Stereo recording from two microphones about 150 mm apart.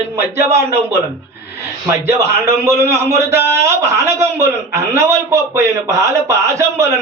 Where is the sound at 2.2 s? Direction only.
20° right (ahead or behind).